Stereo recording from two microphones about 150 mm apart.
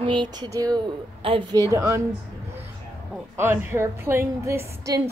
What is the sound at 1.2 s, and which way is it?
Speech, 35° right (ahead or behind).